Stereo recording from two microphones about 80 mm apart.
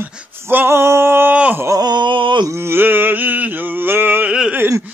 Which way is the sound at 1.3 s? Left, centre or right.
Centre.